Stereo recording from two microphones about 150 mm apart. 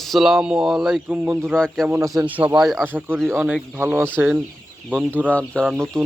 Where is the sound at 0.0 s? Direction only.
Centre (ahead or behind).